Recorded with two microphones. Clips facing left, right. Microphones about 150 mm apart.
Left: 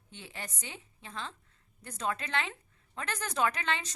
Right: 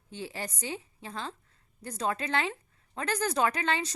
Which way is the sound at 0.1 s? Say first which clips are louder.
Right 7 dB; 35° right (ahead or behind).